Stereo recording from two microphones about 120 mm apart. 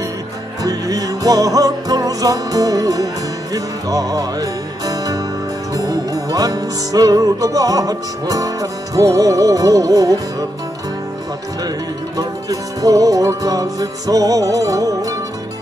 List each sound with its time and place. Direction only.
0.7 s music: 30° right (ahead or behind)
12.2 s music: 30° right (ahead or behind)